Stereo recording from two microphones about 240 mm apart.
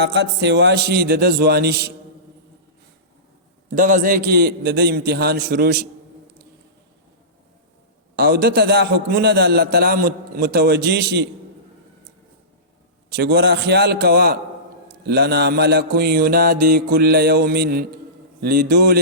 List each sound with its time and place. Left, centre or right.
0.0 s a man's voice: right
3.8 s a man's voice: right
8.1 s a man's voice: right
13.1 s a man's voice: right